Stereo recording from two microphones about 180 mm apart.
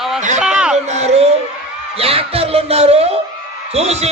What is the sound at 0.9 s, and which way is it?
A man's voice, 35° right (ahead or behind).